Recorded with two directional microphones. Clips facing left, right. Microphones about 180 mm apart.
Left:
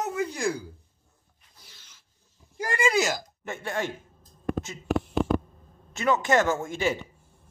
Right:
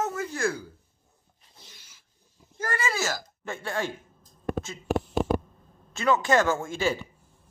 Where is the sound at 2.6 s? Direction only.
15° left (ahead or behind).